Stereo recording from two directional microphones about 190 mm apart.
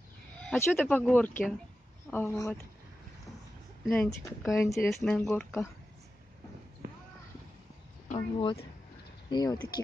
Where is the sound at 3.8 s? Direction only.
5° left (ahead or behind).